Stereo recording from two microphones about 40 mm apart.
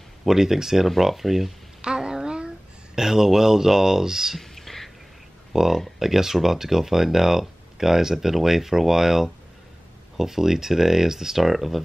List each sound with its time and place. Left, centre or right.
0.2 s speech: centre
1.8 s a sound: right
3.0 s speech: centre
4.4 s whispering: centre
5.5 s speech: centre